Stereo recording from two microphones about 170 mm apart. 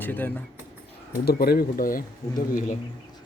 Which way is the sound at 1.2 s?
65° left (ahead or behind).